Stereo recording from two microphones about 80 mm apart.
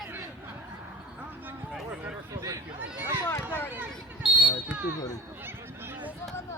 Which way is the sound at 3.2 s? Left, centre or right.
Left.